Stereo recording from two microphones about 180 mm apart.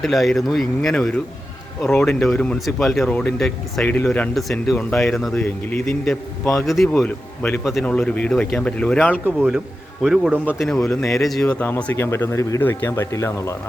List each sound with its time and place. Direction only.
0.0 s speech: centre (ahead or behind)
1.9 s speech: 15° left (ahead or behind)
7.6 s speech: centre (ahead or behind)
9.2 s a man's voice: 10° right (ahead or behind)
10.8 s speech: 15° left (ahead or behind)
11.2 s speech: centre (ahead or behind)